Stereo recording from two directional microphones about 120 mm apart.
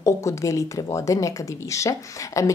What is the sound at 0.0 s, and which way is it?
Speech, 25° left (ahead or behind).